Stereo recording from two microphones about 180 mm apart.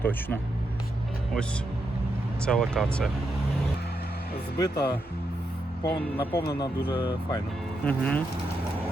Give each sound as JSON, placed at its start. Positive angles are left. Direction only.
{"t": 0.0, "sound": "speech", "side_deg": 10}
{"t": 2.4, "sound": "speech", "side_deg": 5}
{"t": 4.5, "sound": "speech", "side_deg": 60}
{"t": 5.8, "sound": "speech", "side_deg": 10}
{"t": 6.6, "sound": "speech", "side_deg": 30}
{"t": 7.9, "sound": "speech", "side_deg": 10}